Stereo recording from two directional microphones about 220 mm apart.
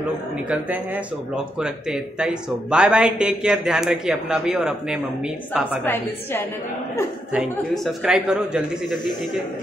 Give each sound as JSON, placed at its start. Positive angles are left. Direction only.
{"t": 1.3, "sound": "speech", "side_deg": -5}
{"t": 7.3, "sound": "speech", "side_deg": 0}